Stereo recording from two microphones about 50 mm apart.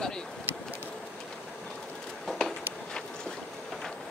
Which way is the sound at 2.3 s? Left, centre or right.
Centre.